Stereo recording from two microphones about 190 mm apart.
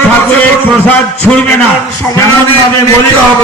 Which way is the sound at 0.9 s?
10° left (ahead or behind).